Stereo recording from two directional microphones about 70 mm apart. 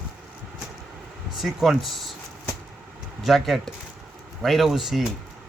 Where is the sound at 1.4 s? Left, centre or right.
Centre.